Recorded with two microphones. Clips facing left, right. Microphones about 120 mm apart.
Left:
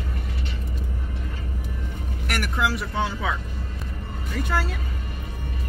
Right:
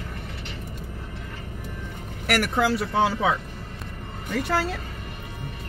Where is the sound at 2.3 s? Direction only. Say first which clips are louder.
Right 4 dB; 70° right (ahead or behind).